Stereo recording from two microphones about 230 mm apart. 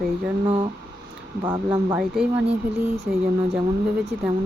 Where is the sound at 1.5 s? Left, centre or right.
Centre.